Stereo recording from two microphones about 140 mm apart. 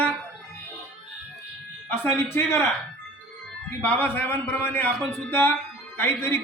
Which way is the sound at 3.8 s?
15° left (ahead or behind).